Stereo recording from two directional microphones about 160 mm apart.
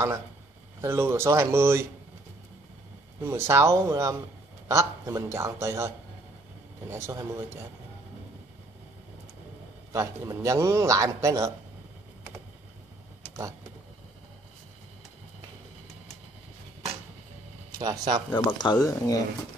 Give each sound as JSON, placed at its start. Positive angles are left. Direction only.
{"t": 0.7, "sound": "speech", "side_deg": -15}
{"t": 3.2, "sound": "a man's voice", "side_deg": -15}
{"t": 6.9, "sound": "speech", "side_deg": -15}
{"t": 9.9, "sound": "a man's voice", "side_deg": -20}
{"t": 17.7, "sound": "a man's voice", "side_deg": -20}
{"t": 18.3, "sound": "speech", "side_deg": 25}